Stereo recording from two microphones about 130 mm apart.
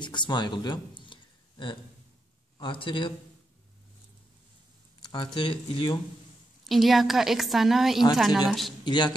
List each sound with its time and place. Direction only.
0.0 s a sound: 35° left (ahead or behind)
2.6 s speech: 40° left (ahead or behind)
5.0 s speech: 35° left (ahead or behind)
6.6 s a woman's voice: centre (ahead or behind)
8.8 s a man's voice: 35° left (ahead or behind)